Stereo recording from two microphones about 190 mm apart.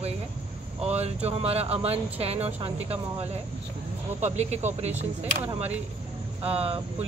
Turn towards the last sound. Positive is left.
turn(degrees=-30)  # may be behind; listen again after turning